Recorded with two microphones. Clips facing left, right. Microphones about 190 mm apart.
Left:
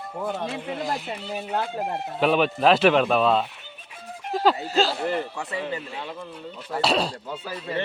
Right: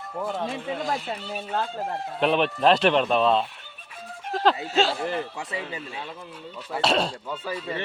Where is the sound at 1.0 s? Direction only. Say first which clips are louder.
Left 1 dB; 10° left (ahead or behind).